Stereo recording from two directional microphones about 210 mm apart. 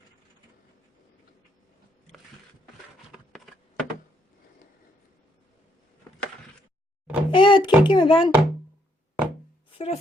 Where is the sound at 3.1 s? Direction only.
Centre (ahead or behind).